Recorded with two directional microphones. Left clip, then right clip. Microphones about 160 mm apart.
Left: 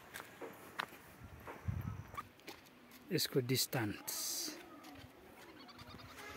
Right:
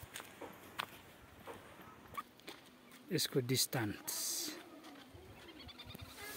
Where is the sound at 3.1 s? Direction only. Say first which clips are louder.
Even; centre (ahead or behind).